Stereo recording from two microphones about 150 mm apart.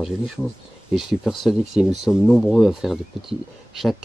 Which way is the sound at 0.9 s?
5° right (ahead or behind).